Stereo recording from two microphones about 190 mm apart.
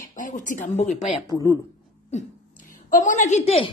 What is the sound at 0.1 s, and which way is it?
Speech, 40° left (ahead or behind).